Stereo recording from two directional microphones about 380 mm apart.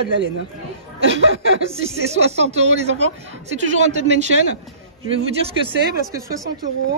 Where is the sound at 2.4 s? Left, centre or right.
Centre.